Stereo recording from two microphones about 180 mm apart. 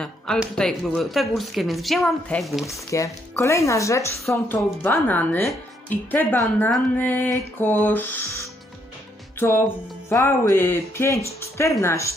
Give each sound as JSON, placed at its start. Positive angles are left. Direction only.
{"t": 0.0, "sound": "speech", "side_deg": 5}
{"t": 2.9, "sound": "speech", "side_deg": 15}